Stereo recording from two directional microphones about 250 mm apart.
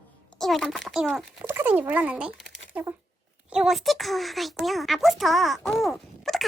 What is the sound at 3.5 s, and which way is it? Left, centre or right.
A child's voice, centre.